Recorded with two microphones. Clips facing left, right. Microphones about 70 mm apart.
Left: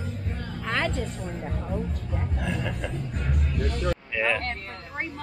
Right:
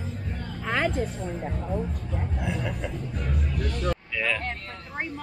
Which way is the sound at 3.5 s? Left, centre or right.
Left.